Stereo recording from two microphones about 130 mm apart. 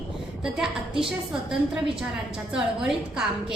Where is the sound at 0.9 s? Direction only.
5° right (ahead or behind).